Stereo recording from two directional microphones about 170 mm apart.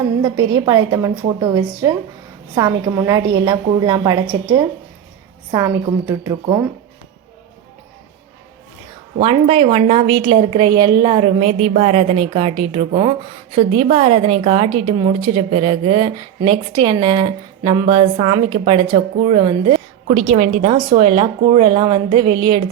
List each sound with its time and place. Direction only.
0.2 s a woman's voice: 20° right (ahead or behind)
9.2 s a woman's voice: 30° right (ahead or behind)
20.1 s a woman's voice: 40° right (ahead or behind); by 22.7 s 25° right (ahead or behind)